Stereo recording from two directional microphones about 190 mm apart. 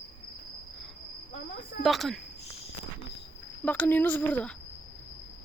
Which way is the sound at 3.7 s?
10° left (ahead or behind).